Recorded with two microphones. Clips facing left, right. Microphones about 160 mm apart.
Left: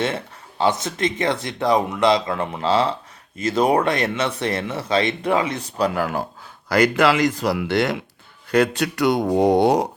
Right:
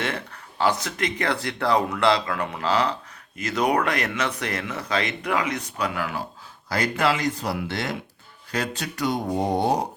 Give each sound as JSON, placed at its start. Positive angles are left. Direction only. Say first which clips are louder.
{"t": 0.6, "sound": "speech", "louder": "left 3 dB", "side_deg": 25}
{"t": 6.7, "sound": "speech", "louder": "left 6 dB", "side_deg": 75}